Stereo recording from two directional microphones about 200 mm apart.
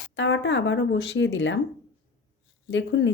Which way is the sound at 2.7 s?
65° left (ahead or behind).